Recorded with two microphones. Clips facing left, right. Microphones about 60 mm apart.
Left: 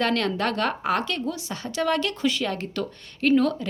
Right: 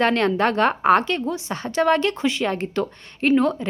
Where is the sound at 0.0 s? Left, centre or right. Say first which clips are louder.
Right 5 dB; right.